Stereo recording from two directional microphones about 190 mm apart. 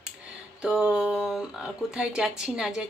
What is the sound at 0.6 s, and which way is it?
Speech, 5° right (ahead or behind).